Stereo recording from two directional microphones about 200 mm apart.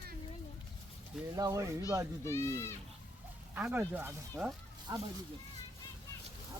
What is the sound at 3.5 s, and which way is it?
Speech, 10° right (ahead or behind).